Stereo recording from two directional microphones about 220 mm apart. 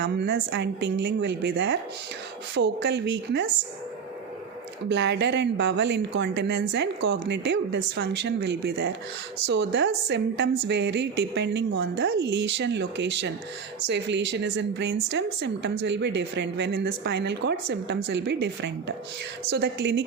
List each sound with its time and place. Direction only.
0.0 s speech: 50° right (ahead or behind)
4.9 s speech: 50° right (ahead or behind)